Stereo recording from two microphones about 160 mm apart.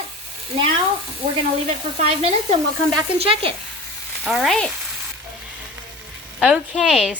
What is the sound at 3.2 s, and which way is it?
Speech, 35° right (ahead or behind).